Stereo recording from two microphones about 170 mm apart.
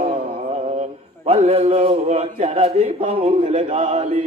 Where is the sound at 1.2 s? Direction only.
35° right (ahead or behind).